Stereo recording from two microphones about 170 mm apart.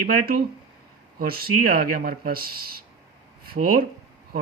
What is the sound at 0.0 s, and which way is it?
Speech, 60° right (ahead or behind).